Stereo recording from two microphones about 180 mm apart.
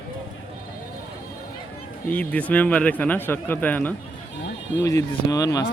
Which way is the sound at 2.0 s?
10° left (ahead or behind).